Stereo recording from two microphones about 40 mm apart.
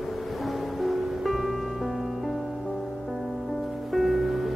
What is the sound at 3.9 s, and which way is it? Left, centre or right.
Music, centre.